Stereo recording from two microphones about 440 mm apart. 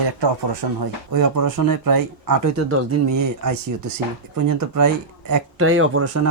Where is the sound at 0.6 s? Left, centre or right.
Right.